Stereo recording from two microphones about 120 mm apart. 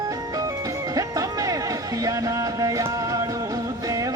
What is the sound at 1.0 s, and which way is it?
Music, 30° right (ahead or behind).